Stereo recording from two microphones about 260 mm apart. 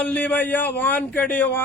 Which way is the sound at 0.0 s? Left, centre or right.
Centre.